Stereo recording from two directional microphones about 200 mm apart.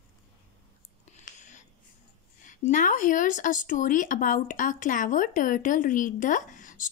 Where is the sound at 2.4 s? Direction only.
40° left (ahead or behind).